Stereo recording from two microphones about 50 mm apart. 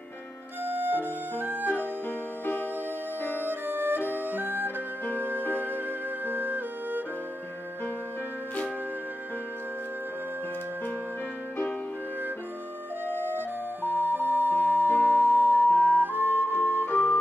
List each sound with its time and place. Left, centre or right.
0.7 s music: right
3.2 s music: left
3.4 s music: right
13.0 s flute: right
13.8 s music: right
16.8 s music: left